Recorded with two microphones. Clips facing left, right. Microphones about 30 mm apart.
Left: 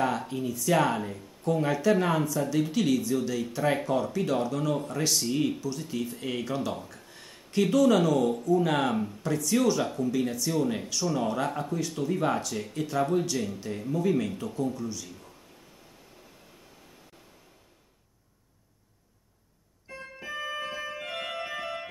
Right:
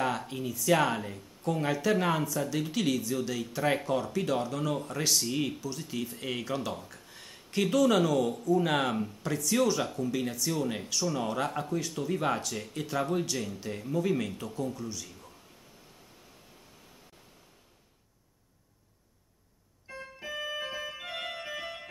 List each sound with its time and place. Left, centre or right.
0.3 s speech: centre
6.9 s a sound: centre
8.5 s speech: centre
9.8 s speech: centre
10.1 s speech: centre
19.9 s keyboard: centre